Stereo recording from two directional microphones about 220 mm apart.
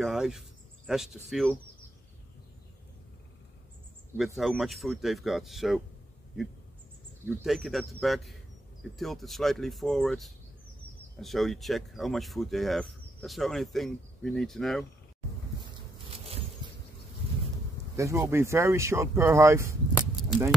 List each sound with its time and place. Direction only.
0.0 s speech: centre (ahead or behind)
4.2 s speech: centre (ahead or behind)
7.2 s speech: 10° right (ahead or behind)
7.5 s speech: centre (ahead or behind)
15.6 s a sound: 25° right (ahead or behind)
17.9 s speech: 15° right (ahead or behind)
19.9 s a sound: centre (ahead or behind)